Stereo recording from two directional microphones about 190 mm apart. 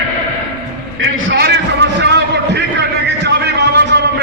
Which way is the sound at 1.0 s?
65° right (ahead or behind).